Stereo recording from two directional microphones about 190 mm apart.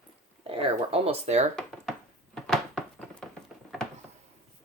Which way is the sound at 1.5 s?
Centre (ahead or behind).